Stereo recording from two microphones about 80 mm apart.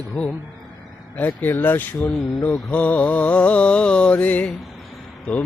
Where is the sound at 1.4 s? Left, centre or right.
Left.